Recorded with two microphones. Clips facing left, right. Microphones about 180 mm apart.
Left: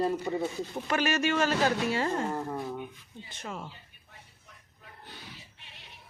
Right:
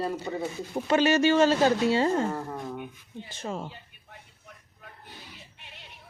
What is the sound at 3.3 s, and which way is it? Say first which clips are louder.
Speech: right 5 dB; 30° right (ahead or behind).